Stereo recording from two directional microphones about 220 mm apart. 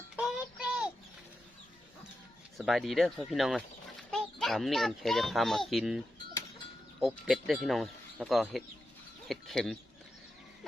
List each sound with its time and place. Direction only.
0.2 s child singing: 5° right (ahead or behind)
2.6 s a child's voice: centre (ahead or behind)
7.0 s a child's voice: centre (ahead or behind)